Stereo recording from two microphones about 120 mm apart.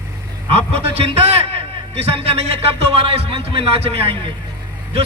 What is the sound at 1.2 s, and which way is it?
A man's voice, 60° right (ahead or behind).